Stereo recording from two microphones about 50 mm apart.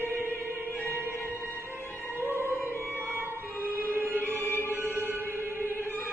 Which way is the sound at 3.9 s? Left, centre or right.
Right.